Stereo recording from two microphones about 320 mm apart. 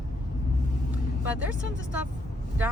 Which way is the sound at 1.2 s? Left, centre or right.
Centre.